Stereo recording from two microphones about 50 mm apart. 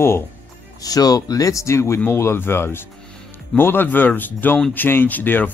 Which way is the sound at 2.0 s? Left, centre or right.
Left.